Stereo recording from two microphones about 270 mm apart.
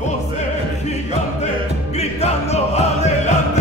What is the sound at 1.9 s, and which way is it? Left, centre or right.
Music, left.